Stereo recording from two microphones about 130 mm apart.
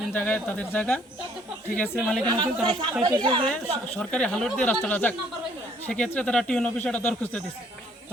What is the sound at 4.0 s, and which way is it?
Speech, 5° left (ahead or behind).